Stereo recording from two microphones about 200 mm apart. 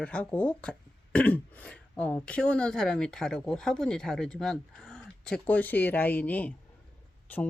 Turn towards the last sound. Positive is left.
turn(degrees=10)  # may be behind; listen again after turning